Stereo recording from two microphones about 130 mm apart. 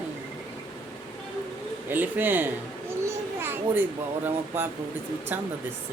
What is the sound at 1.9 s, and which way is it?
A child's voice, 15° right (ahead or behind).